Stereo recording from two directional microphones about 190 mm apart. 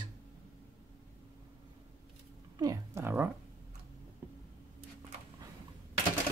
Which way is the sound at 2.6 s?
15° right (ahead or behind).